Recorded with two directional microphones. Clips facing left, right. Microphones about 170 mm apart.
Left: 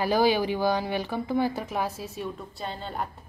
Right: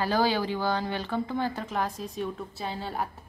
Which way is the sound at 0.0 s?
15° left (ahead or behind).